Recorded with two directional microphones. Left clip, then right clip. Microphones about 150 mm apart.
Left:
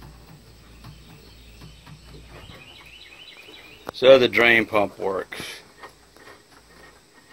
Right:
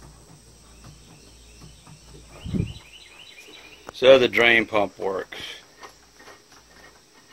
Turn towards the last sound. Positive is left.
turn(degrees=-10)  # may be behind; listen again after turning